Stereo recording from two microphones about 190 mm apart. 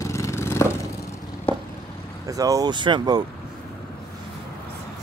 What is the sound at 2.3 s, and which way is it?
Speech, 20° right (ahead or behind).